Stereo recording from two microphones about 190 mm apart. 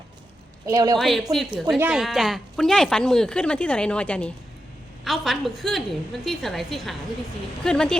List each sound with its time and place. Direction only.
0.6 s a woman's voice: 20° right (ahead or behind)
0.9 s speech: centre (ahead or behind)